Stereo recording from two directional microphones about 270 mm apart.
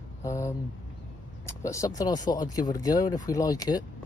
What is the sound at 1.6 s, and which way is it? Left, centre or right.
Speech, centre.